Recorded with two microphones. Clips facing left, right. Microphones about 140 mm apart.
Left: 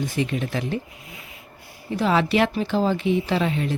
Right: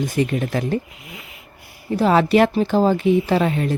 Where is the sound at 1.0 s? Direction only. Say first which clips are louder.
Right 3 dB; 75° right (ahead or behind).